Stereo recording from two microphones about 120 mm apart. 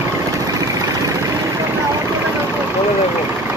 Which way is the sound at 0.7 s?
25° right (ahead or behind).